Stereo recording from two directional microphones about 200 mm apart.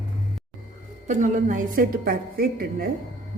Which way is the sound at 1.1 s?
40° right (ahead or behind).